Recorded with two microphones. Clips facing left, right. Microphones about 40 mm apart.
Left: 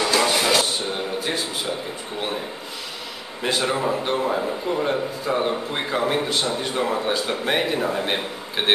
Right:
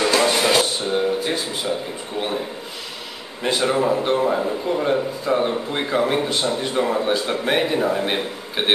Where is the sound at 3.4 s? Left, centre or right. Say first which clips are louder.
Right 3 dB; centre.